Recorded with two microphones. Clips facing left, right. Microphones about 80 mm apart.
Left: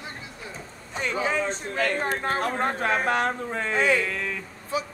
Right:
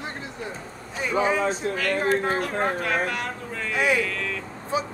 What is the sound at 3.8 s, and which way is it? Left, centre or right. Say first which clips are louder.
Speech: even; centre.